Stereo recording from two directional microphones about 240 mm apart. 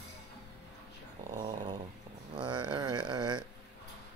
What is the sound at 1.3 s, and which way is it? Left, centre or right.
Dog, centre.